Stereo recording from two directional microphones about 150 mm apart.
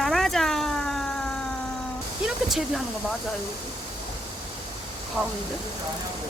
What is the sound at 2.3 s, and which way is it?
Speech, centre (ahead or behind).